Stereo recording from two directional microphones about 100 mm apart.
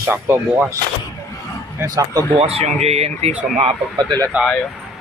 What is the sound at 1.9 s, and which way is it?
Speech, 35° right (ahead or behind).